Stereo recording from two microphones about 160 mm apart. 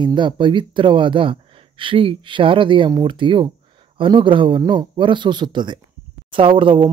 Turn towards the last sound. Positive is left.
turn(degrees=-30)  # may be behind; listen again after turning